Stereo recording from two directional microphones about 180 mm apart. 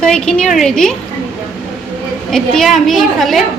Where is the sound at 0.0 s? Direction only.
5° left (ahead or behind).